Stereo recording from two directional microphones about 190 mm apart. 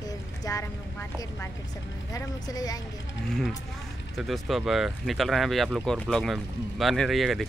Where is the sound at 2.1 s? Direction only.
20° left (ahead or behind).